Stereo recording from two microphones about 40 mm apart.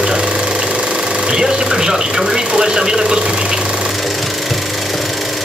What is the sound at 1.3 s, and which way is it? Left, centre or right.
Vehicle, centre.